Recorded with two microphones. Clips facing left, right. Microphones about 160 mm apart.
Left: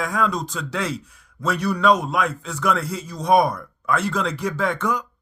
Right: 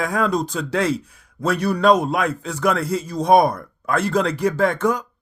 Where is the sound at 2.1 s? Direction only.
55° right (ahead or behind).